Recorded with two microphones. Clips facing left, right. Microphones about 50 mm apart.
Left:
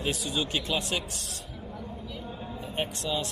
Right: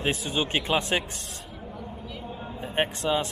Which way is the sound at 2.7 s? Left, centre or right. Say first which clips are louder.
Right 6 dB; right.